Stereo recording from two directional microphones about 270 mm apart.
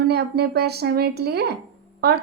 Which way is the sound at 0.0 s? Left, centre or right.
Right.